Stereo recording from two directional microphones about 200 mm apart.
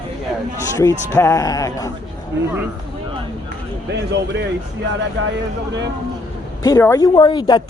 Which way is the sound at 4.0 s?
60° right (ahead or behind).